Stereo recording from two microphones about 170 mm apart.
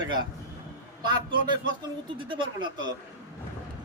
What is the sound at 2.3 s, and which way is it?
Speech, 30° right (ahead or behind).